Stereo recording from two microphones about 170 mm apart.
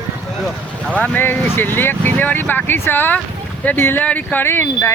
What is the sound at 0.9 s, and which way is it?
Speech, 10° left (ahead or behind).